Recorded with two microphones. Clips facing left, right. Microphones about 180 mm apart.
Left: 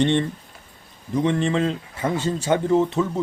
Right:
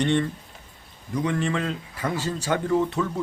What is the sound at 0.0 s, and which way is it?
Speech, 25° left (ahead or behind).